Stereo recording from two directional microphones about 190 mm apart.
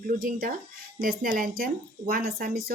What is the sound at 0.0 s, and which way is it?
Speech, 45° right (ahead or behind).